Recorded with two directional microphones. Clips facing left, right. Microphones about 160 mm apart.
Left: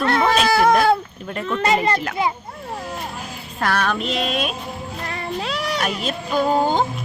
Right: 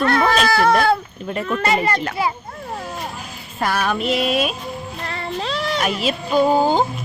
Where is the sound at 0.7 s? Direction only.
Centre (ahead or behind).